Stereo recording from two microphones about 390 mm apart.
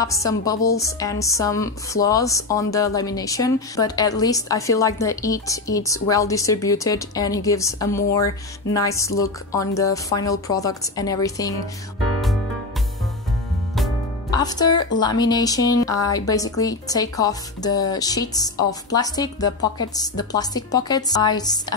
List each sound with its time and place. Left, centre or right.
0.0 s speech: centre
14.3 s speech: centre